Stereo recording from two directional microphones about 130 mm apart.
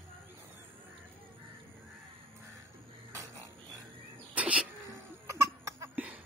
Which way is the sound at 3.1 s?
25° right (ahead or behind).